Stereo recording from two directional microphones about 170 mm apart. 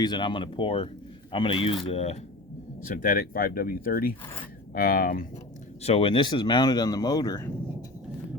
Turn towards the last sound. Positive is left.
turn(degrees=20)  # may be behind; listen again after turning